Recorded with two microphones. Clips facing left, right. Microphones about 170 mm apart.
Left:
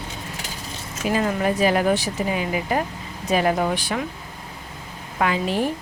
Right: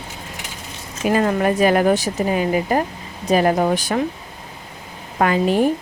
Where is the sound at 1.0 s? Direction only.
55° right (ahead or behind).